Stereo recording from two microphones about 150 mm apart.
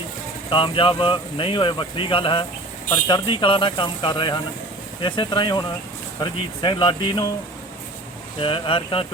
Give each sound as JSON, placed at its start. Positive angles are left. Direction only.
{"t": 0.5, "sound": "speech", "side_deg": 35}
{"t": 8.4, "sound": "speech", "side_deg": 35}